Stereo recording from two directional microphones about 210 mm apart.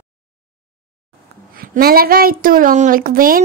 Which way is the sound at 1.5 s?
45° right (ahead or behind).